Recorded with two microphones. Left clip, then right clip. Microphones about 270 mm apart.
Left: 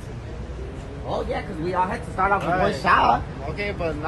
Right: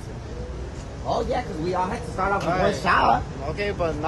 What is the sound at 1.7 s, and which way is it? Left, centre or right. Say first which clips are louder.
Speech: left 3 dB; centre.